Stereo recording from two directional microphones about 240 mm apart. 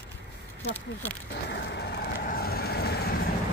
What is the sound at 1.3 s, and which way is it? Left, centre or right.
Vehicle, left.